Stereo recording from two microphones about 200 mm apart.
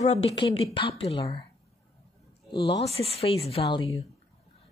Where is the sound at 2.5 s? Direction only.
25° left (ahead or behind).